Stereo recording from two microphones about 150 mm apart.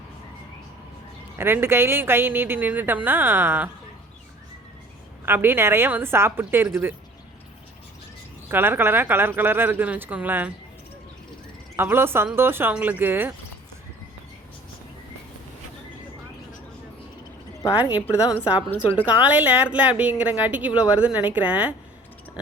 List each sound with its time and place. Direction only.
1.4 s speech: 15° right (ahead or behind)
5.2 s speech: 15° right (ahead or behind)
8.4 s speech: 15° right (ahead or behind)
11.8 s speech: 15° right (ahead or behind)
17.7 s speech: 10° right (ahead or behind)
18.0 s a woman's voice: 15° left (ahead or behind)
19.0 s speech: 10° right (ahead or behind)